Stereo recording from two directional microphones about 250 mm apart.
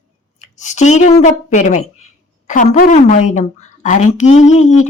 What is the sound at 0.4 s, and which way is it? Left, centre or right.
A woman's voice, left.